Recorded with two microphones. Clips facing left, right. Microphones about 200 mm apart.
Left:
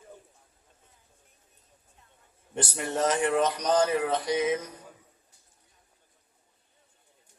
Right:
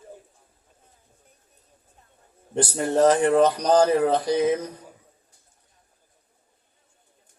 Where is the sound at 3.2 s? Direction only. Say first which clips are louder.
Right 7 dB; 35° right (ahead or behind).